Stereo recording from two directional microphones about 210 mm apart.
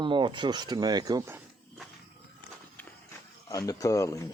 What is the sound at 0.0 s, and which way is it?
Speech, 20° right (ahead or behind).